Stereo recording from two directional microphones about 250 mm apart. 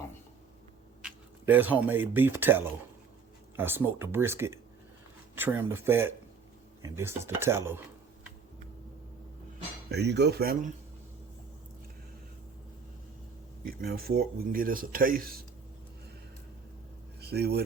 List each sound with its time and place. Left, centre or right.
1.0 s speech: centre
9.9 s speech: right
13.7 s speech: right
17.2 s speech: right